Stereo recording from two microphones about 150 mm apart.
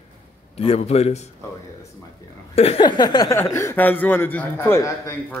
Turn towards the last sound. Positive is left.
turn(degrees=15)  # may be behind; listen again after turning